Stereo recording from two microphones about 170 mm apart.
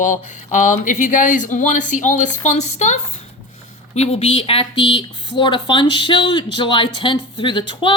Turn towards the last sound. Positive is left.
turn(degrees=30)  # may be behind; listen again after turning